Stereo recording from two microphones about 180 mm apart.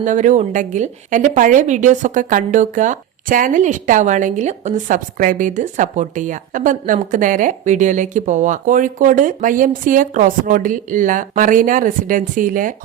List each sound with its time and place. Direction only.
0.0 s a woman's voice: 45° right (ahead or behind)